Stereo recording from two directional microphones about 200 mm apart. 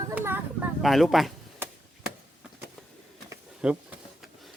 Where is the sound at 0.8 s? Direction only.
Centre (ahead or behind).